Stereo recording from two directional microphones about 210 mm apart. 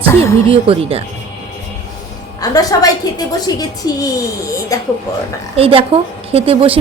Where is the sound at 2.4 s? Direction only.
15° left (ahead or behind).